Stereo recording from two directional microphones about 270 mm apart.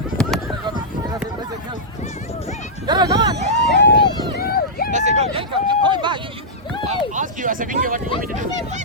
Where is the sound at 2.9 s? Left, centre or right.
Centre.